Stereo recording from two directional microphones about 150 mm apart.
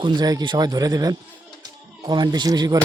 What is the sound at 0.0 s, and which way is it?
Speech, 30° right (ahead or behind).